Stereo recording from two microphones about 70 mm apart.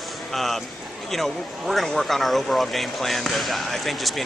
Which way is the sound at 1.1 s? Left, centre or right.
Centre.